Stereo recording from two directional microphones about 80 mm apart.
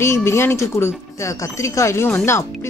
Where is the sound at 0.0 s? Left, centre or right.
Left.